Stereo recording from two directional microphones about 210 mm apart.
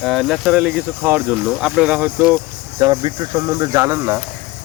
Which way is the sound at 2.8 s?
20° right (ahead or behind).